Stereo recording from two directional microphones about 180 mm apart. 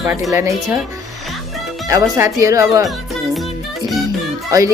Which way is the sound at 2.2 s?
15° right (ahead or behind).